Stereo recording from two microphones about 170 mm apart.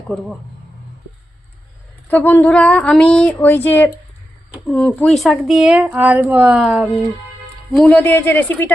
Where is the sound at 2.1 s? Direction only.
10° left (ahead or behind).